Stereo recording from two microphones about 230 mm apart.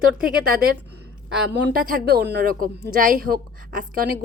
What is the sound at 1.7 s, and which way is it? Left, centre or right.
A woman's voice, right.